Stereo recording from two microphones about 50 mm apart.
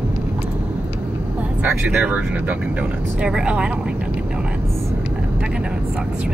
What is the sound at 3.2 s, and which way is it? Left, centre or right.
Speech, centre.